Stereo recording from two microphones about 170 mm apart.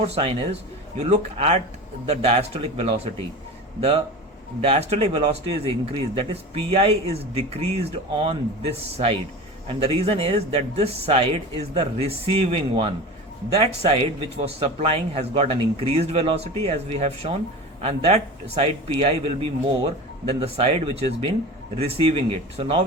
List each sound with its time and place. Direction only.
0.0 s speech: 35° right (ahead or behind)